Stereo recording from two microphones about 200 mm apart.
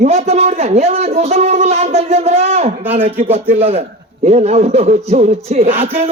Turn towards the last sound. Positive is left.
turn(degrees=-30)  # may be behind; listen again after turning